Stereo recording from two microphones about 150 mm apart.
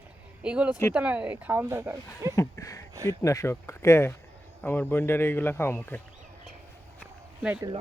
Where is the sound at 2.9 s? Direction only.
25° right (ahead or behind).